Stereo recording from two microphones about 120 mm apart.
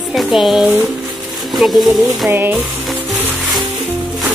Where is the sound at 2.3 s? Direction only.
20° right (ahead or behind).